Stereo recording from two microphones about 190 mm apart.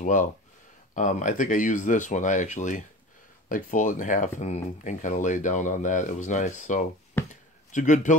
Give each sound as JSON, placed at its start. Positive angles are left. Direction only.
{"t": 0.0, "sound": "speech", "side_deg": 40}
{"t": 7.2, "sound": "a sound", "side_deg": 10}
{"t": 7.7, "sound": "speech", "side_deg": 40}